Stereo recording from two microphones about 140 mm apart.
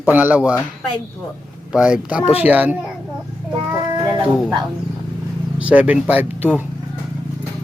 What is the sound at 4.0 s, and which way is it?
Speech, 30° right (ahead or behind).